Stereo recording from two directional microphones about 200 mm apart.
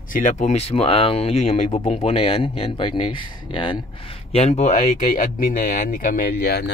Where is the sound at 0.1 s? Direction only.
40° left (ahead or behind).